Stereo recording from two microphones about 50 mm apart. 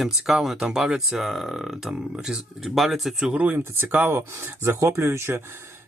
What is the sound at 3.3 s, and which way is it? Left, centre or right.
Speech, right.